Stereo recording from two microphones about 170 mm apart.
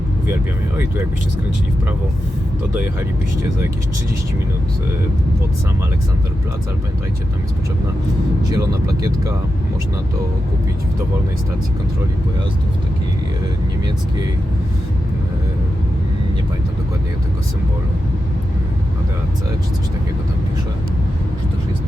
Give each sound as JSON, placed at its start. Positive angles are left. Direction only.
{"t": 8.4, "sound": "speech", "side_deg": -20}